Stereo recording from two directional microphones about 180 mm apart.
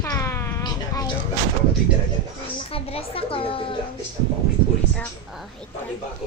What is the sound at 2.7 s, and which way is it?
Speech, 30° left (ahead or behind).